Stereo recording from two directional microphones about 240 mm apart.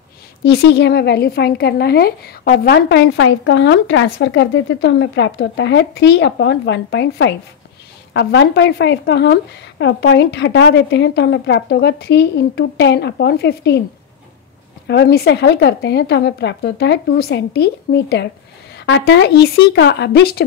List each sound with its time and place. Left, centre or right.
0.4 s a woman's voice: left
14.9 s a woman's voice: left